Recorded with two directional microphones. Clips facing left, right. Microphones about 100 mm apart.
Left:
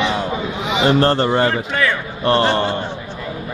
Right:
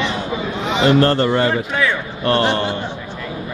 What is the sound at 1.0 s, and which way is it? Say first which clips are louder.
Speech: even; 25° left (ahead or behind).